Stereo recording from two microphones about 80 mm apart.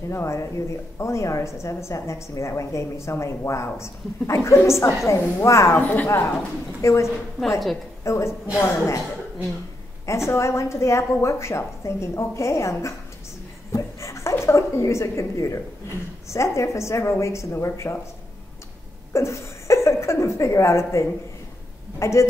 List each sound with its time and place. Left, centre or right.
0.1 s a woman's voice: left
5.8 s a woman's voice: centre
6.0 s a woman's voice: left
10.0 s a woman's voice: left
13.7 s a sound: left
16.3 s a woman's voice: left
19.1 s a woman's voice: left